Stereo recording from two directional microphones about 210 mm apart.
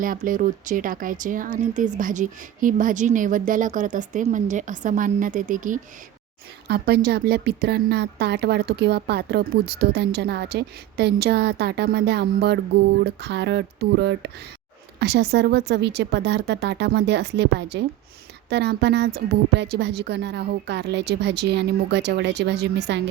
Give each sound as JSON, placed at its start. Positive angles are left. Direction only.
{"t": 0.0, "sound": "speech", "side_deg": -40}
{"t": 6.7, "sound": "speech", "side_deg": -50}